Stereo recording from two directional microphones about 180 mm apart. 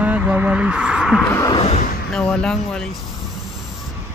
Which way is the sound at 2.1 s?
5° left (ahead or behind).